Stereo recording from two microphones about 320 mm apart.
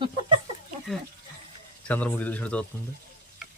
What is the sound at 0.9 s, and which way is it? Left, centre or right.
Speech, centre.